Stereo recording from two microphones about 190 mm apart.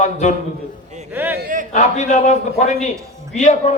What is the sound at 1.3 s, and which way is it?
Speech, 50° right (ahead or behind).